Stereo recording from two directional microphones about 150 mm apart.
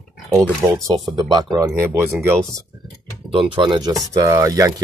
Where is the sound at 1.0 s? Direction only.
30° right (ahead or behind).